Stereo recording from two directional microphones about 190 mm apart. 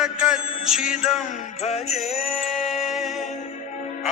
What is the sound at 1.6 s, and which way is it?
Music, 35° left (ahead or behind).